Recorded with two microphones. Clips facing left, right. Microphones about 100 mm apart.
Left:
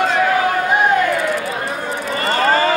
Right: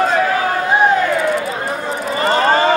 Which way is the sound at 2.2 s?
20° right (ahead or behind).